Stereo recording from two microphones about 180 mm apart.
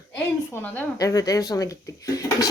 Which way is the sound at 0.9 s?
20° left (ahead or behind).